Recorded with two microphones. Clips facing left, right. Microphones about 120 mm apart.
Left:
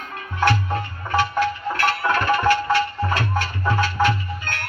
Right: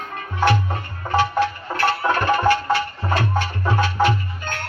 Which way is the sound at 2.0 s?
20° right (ahead or behind).